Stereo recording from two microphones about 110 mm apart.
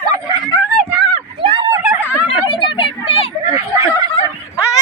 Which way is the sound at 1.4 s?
55° right (ahead or behind).